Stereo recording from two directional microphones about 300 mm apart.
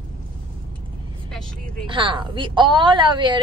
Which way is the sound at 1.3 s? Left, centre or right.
Centre.